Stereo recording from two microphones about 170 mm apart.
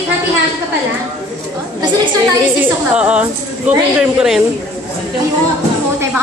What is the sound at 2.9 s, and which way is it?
Speech, 5° right (ahead or behind).